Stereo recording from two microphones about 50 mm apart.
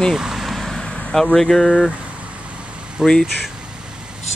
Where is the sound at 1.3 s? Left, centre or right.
Centre.